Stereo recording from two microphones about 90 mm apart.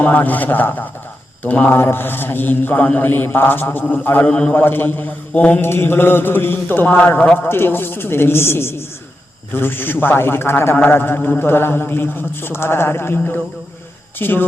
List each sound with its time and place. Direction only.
0.0 s mantra: 20° left (ahead or behind)
4.6 s mantra: 25° left (ahead or behind)